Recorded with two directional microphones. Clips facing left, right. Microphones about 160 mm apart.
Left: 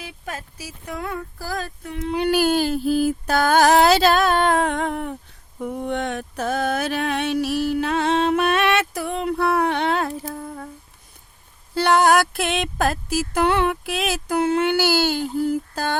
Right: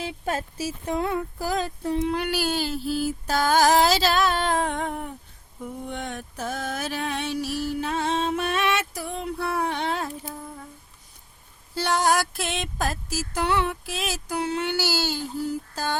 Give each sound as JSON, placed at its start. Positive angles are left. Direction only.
{"t": 0.0, "sound": "speech", "side_deg": -30}
{"t": 2.3, "sound": "speech", "side_deg": 50}
{"t": 5.5, "sound": "mantra", "side_deg": 75}
{"t": 11.7, "sound": "speech", "side_deg": 60}